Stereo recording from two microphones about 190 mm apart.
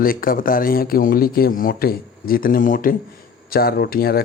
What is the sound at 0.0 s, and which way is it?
Speech, 50° left (ahead or behind).